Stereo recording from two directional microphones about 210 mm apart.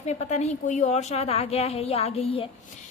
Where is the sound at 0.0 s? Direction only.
30° left (ahead or behind).